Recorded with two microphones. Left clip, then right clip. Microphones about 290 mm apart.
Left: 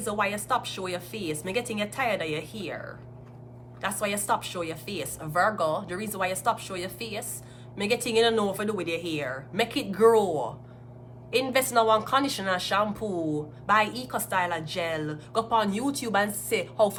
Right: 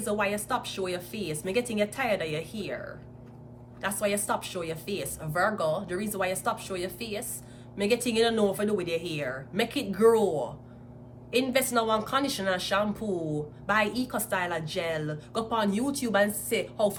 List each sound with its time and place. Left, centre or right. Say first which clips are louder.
0.0 s speech: left 1 dB; centre